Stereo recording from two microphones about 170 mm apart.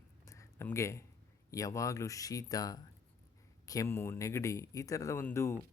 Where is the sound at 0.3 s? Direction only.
15° left (ahead or behind).